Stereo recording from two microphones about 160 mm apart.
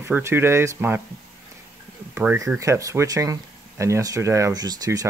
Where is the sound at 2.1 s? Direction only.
15° right (ahead or behind).